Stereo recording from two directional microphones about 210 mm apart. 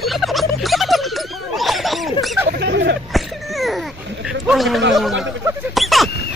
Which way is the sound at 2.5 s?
55° right (ahead or behind).